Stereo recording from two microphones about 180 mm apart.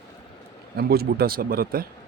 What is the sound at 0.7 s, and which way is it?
Speech, 60° right (ahead or behind).